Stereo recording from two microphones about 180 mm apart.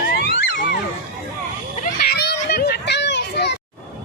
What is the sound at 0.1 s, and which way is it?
Music, 55° left (ahead or behind).